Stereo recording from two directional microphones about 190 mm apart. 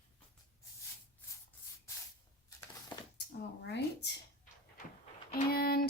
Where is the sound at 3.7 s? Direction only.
60° left (ahead or behind).